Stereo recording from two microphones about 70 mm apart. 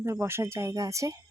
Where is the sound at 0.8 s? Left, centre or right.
Right.